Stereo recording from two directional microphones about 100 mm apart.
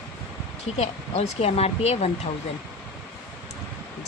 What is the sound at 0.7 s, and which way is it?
Speech, 90° left.